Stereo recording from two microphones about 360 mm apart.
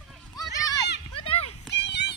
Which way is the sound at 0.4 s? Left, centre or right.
Centre.